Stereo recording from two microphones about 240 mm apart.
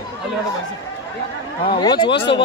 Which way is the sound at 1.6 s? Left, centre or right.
Centre.